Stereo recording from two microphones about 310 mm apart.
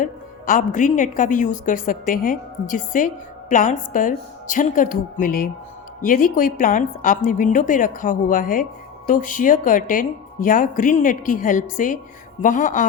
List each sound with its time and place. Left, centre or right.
0.0 s a woman's voice: left